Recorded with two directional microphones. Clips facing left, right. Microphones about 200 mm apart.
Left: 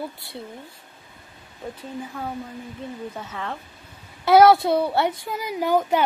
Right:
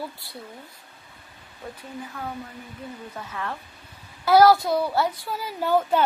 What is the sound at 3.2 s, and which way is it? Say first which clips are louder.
A woman's voice: left 1 dB; 20° left (ahead or behind).